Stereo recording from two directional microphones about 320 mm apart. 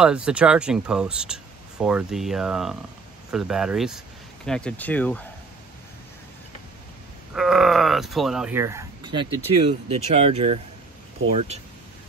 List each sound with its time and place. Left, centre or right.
0.0 s speech: centre
7.3 s speech: centre